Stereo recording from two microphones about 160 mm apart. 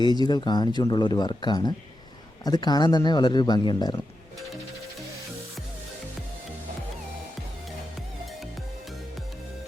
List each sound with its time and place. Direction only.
0.0 s speech: 25° left (ahead or behind)